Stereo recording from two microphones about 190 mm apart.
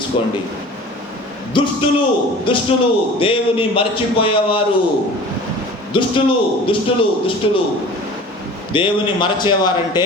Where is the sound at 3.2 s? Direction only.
30° left (ahead or behind).